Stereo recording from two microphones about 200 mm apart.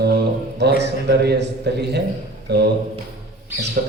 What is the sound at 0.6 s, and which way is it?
A man's voice, 60° right (ahead or behind).